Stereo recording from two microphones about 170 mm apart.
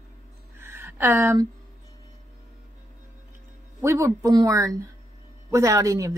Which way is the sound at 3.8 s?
15° right (ahead or behind).